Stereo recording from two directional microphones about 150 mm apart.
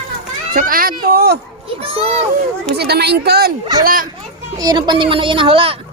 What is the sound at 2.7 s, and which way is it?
Speech, 90° right.